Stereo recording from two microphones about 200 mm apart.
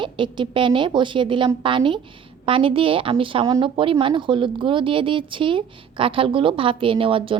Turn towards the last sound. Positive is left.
turn(degrees=-25)  # may be behind; listen again after turning